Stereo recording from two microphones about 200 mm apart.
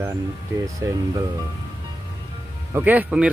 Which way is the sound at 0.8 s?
15° right (ahead or behind).